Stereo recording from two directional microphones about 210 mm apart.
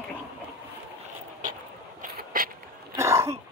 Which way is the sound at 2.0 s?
40° right (ahead or behind).